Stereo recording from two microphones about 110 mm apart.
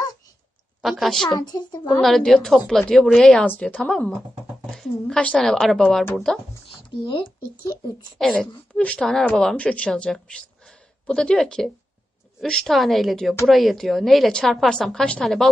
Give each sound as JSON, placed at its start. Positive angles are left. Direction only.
{"t": 0.8, "sound": "a woman's voice", "side_deg": 0}
{"t": 1.3, "sound": "a woman's voice", "side_deg": 40}
{"t": 2.0, "sound": "a woman's voice", "side_deg": 0}
{"t": 8.2, "sound": "a woman's voice", "side_deg": 0}